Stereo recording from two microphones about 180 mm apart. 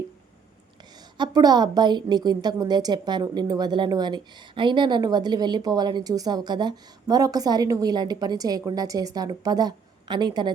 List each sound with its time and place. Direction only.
1.2 s a woman's voice: 20° right (ahead or behind)